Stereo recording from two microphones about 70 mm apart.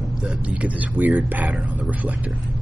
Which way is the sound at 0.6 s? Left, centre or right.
Right.